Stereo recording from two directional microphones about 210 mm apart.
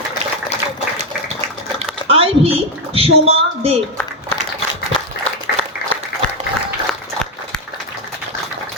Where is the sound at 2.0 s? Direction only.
25° right (ahead or behind).